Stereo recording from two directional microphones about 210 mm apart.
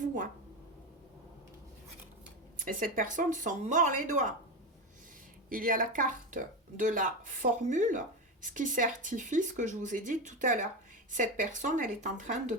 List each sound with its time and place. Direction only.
2.6 s speech: 40° right (ahead or behind)
5.5 s speech: 40° right (ahead or behind)